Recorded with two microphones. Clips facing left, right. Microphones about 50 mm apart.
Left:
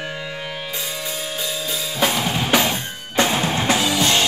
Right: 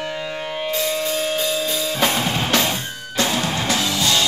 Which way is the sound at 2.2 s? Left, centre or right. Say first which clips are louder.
Left 1 dB; centre.